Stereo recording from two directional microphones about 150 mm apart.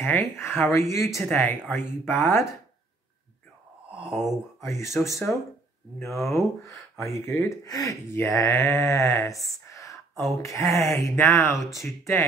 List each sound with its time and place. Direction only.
0.0 s speech: 15° left (ahead or behind)
3.9 s a sound: 5° right (ahead or behind)
4.6 s speech: 20° left (ahead or behind)
6.0 s speech: centre (ahead or behind)
6.6 s speech: 20° left (ahead or behind)
9.3 s a sound: 20° left (ahead or behind)
10.3 s speech: 20° left (ahead or behind)